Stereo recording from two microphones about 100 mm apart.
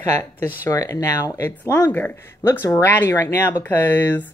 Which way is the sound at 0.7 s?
35° left (ahead or behind).